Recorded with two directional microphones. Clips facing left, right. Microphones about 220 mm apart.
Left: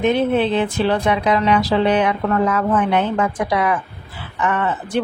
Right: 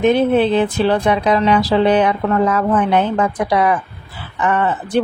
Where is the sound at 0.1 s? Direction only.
35° right (ahead or behind).